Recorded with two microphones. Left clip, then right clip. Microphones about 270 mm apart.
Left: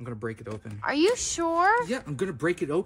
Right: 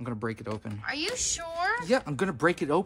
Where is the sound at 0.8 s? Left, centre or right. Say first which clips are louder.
Left 7 dB; centre.